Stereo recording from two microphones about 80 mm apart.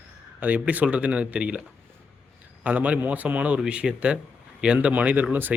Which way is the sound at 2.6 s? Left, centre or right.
Centre.